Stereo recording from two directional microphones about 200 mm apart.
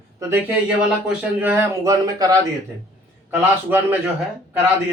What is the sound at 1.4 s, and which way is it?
Speech, 10° right (ahead or behind).